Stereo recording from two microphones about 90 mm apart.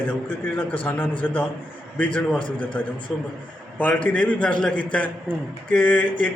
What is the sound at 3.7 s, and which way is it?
Speech, 15° left (ahead or behind).